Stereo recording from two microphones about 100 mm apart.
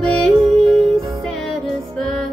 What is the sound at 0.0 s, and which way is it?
Music, 5° left (ahead or behind).